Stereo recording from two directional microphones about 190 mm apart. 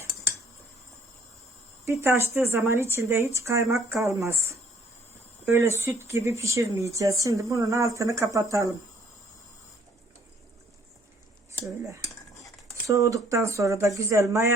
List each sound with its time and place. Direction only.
1.8 s speech: 15° right (ahead or behind)
12.9 s speech: 15° right (ahead or behind)